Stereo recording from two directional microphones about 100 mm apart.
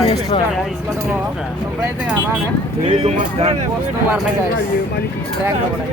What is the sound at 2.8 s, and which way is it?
Speech, 90° right.